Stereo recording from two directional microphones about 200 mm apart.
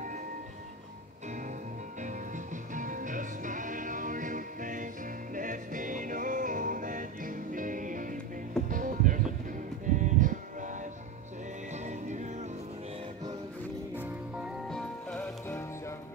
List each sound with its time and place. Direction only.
2.0 s music: 40° right (ahead or behind)
14.7 s music: 5° left (ahead or behind)